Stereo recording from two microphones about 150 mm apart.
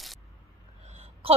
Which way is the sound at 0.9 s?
40° right (ahead or behind).